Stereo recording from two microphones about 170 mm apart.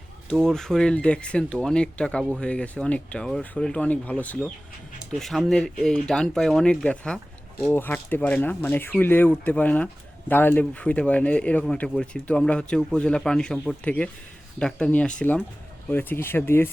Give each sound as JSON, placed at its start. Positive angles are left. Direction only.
{"t": 0.4, "sound": "speech", "side_deg": 5}